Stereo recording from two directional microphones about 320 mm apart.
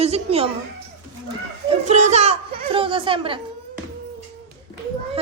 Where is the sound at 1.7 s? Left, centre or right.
Right.